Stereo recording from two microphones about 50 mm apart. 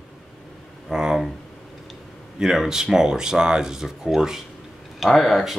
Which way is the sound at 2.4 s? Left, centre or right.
Centre.